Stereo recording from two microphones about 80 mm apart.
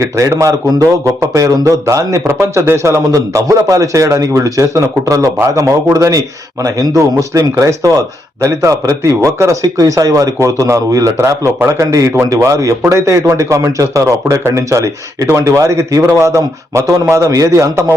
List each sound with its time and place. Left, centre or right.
0.0 s a man's voice: right